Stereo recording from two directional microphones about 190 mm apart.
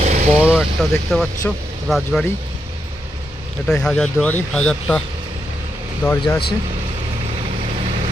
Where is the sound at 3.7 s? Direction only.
5° left (ahead or behind).